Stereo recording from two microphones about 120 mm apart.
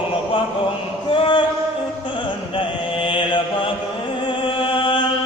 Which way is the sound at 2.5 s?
45° left (ahead or behind).